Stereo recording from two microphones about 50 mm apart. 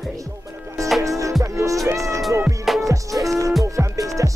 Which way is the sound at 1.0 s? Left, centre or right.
Right.